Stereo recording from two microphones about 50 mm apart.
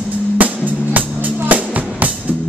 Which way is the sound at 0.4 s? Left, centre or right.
Right.